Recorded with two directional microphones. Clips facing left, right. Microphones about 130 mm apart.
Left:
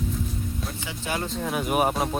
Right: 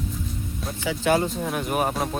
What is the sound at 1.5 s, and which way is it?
Speech, 5° left (ahead or behind).